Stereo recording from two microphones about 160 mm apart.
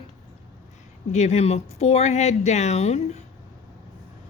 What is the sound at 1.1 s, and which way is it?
Speech, 45° left (ahead or behind).